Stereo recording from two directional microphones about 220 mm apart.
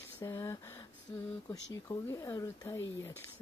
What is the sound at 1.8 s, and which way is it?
Speech, 15° left (ahead or behind).